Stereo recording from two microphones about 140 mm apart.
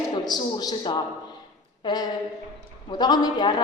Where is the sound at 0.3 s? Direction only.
30° left (ahead or behind).